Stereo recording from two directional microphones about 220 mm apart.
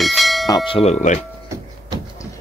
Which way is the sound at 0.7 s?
25° left (ahead or behind).